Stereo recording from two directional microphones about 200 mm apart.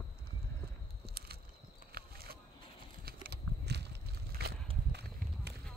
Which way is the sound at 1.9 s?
50° right (ahead or behind).